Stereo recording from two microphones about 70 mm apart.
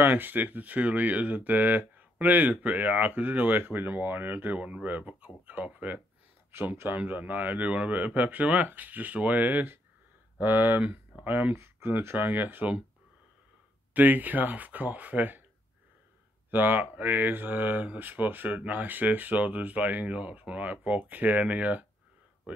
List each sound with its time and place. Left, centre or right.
0.0 s speech: right
10.8 s speech: centre
11.5 s speech: right
13.9 s speech: right
16.4 s speech: right